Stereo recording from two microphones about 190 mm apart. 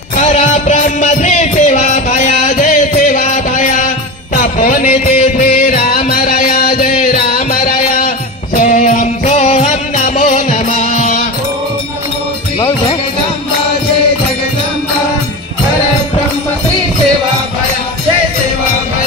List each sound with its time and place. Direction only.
0.2 s music: 35° left (ahead or behind)
10.0 s music: 40° left (ahead or behind)